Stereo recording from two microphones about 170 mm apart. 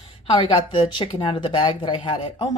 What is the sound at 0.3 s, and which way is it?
Speech, 30° left (ahead or behind).